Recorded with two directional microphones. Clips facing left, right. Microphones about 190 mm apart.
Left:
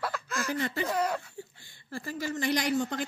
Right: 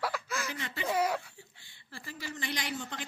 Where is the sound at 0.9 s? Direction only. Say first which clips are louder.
Right 4 dB; 10° right (ahead or behind).